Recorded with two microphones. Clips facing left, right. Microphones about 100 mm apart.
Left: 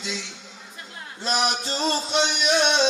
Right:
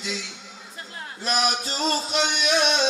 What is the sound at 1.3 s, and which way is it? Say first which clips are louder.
Music: even; 25° left (ahead or behind).